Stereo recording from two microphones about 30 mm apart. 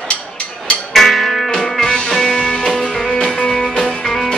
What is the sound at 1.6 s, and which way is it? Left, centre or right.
Music, centre.